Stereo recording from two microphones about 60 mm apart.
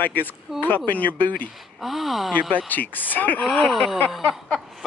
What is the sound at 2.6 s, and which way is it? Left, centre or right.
Speech, left.